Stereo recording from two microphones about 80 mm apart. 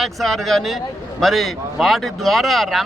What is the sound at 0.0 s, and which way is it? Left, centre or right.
Speech, centre.